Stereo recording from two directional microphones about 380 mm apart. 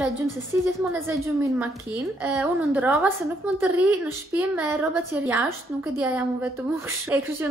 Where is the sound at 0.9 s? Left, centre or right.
Centre.